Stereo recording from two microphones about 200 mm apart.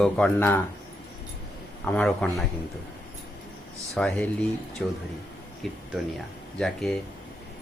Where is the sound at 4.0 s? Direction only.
5° left (ahead or behind).